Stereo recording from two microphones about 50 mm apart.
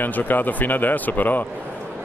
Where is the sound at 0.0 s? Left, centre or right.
Left.